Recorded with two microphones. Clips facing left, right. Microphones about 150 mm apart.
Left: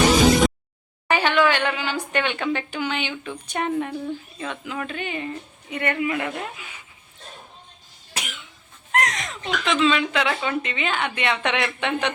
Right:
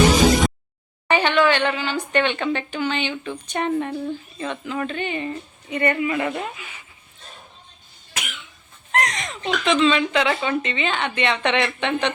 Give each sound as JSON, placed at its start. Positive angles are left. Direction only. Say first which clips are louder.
{"t": 1.0, "sound": "speech", "louder": "right 2 dB", "side_deg": 5}
{"t": 8.1, "sound": "cough", "louder": "even", "side_deg": 30}
{"t": 8.9, "sound": "speech", "louder": "even", "side_deg": 0}